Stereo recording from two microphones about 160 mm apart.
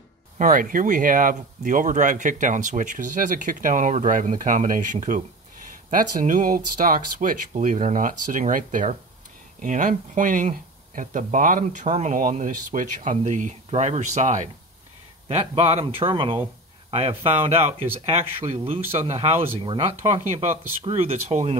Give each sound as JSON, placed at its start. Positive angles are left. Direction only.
{"t": 0.4, "sound": "speech", "side_deg": -60}
{"t": 15.2, "sound": "speech", "side_deg": -40}